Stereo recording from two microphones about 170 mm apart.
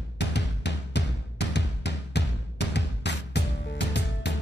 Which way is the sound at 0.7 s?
90° left.